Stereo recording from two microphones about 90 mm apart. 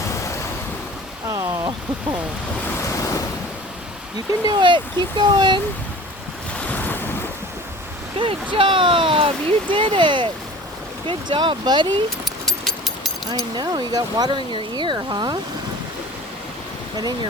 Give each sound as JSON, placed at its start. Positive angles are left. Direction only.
{"t": 0.1, "sound": "vehicle", "side_deg": 35}
{"t": 2.9, "sound": "waves", "side_deg": 35}
{"t": 4.3, "sound": "speech", "side_deg": -50}
{"t": 6.7, "sound": "waves", "side_deg": 20}
{"t": 8.2, "sound": "speech", "side_deg": -70}
{"t": 13.6, "sound": "speech", "side_deg": -50}